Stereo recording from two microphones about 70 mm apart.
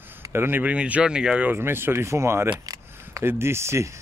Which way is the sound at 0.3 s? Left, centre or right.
Right.